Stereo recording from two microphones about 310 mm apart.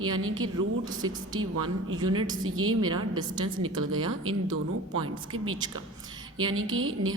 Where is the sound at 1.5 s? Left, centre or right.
Right.